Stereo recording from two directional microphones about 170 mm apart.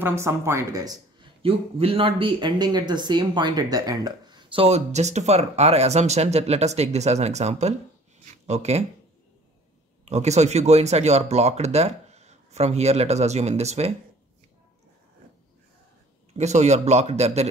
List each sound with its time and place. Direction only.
0.0 s a woman's voice: 15° right (ahead or behind)
1.4 s speech: 35° right (ahead or behind)
10.0 s speech: 40° right (ahead or behind)
16.3 s speech: 40° right (ahead or behind)